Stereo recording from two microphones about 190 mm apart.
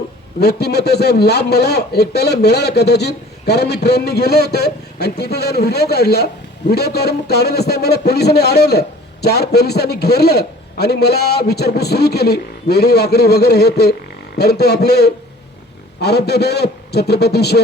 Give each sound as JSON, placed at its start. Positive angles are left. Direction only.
{"t": 0.3, "sound": "a man's voice", "side_deg": 60}